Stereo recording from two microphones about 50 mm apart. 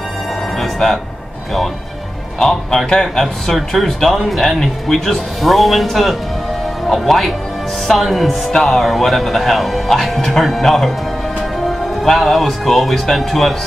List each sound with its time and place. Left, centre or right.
2.3 s speech: centre
12.0 s speech: centre